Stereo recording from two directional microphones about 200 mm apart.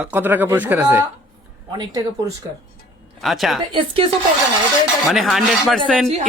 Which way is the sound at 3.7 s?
25° right (ahead or behind).